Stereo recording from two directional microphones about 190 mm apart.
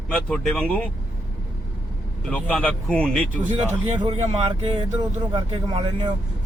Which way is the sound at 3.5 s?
30° right (ahead or behind).